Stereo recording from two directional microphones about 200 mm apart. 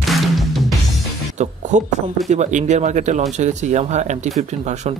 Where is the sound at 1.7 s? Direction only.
35° right (ahead or behind).